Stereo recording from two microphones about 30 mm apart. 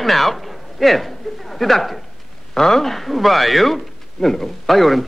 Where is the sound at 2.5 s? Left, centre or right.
Centre.